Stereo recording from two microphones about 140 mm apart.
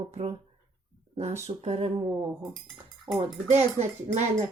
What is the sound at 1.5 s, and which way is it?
Speech, 45° right (ahead or behind).